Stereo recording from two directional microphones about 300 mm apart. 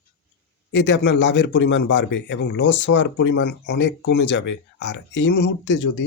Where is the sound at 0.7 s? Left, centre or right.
Left.